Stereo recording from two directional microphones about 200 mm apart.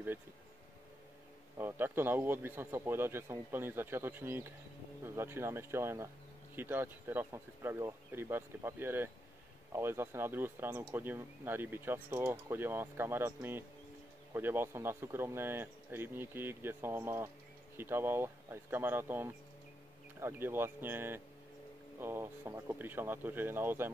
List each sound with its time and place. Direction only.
1.6 s speech: 10° right (ahead or behind)